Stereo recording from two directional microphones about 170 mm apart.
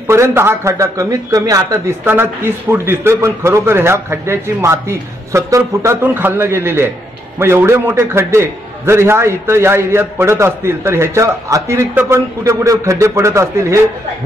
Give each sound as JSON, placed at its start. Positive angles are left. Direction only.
{"t": 0.0, "sound": "a man's voice", "side_deg": -15}